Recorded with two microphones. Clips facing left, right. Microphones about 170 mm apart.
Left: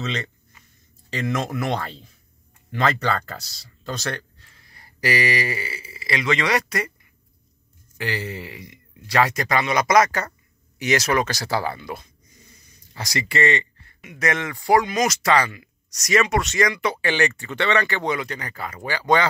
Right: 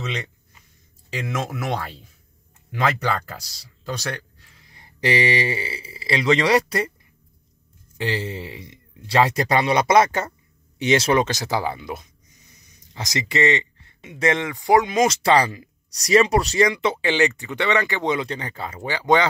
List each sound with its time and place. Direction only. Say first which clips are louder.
0.0 s speech: left 1 dB; 10° right (ahead or behind); by 6.9 s 30° right (ahead or behind)
8.0 s speech: right 2 dB; 25° right (ahead or behind)